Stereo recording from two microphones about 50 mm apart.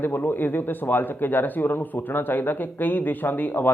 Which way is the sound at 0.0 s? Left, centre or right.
Left.